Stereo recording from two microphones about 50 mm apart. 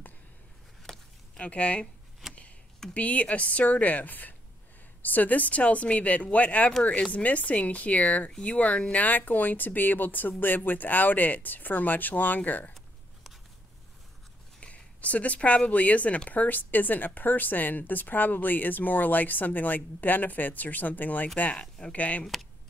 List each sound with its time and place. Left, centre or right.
0.9 s a sound: centre
1.4 s speech: left
2.2 s a sound: centre
2.9 s speech: left
14.6 s speech: left
22.2 s speech: centre